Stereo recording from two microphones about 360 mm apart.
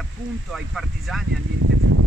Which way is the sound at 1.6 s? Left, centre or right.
Right.